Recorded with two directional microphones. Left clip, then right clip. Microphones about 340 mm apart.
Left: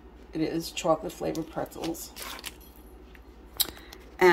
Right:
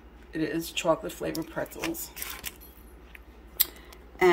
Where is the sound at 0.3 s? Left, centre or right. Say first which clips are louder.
Even; centre.